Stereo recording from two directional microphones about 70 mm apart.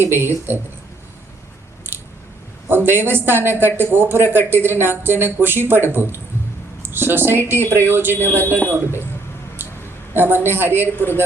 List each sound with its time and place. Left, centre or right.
0.0 s speech: right
2.6 s speech: right
8.1 s speech: left
9.6 s a sound: right
10.2 s speech: right